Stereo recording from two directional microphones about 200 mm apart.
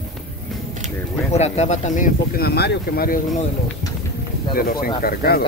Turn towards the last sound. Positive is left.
turn(degrees=50)  # may be behind; listen again after turning